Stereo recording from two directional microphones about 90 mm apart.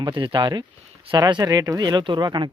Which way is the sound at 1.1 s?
50° right (ahead or behind).